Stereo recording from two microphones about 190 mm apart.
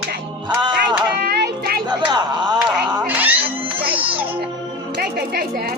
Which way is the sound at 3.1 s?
10° right (ahead or behind).